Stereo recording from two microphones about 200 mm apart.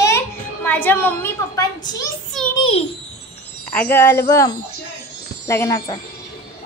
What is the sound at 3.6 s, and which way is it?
A child's voice, 10° left (ahead or behind).